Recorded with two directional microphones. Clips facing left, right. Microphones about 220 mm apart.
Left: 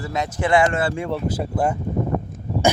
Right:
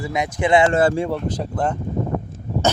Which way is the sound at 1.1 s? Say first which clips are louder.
Even; 5° left (ahead or behind).